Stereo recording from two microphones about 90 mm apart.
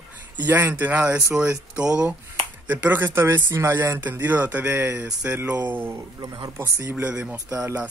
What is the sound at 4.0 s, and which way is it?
Speech, 20° right (ahead or behind).